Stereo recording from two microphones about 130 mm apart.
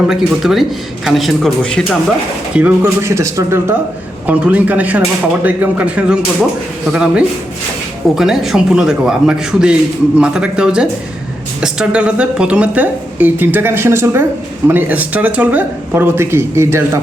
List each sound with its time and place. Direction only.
0.1 s a man's voice: centre (ahead or behind)
2.6 s speech: 15° right (ahead or behind)
4.3 s a man's voice: 10° right (ahead or behind)